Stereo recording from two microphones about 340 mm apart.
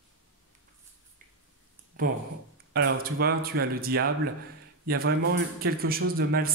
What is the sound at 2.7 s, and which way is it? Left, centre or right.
A man's voice, right.